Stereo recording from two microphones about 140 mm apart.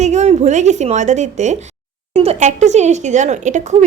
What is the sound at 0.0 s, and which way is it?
A woman's voice, 55° right (ahead or behind).